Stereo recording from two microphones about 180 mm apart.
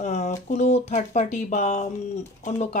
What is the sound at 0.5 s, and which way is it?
Speech, 40° left (ahead or behind).